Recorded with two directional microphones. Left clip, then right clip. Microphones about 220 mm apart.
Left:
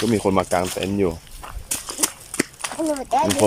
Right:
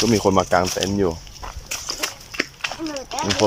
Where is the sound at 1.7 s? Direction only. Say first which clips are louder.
Even; 30° left (ahead or behind).